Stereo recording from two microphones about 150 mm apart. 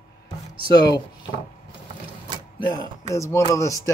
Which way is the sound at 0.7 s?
25° left (ahead or behind).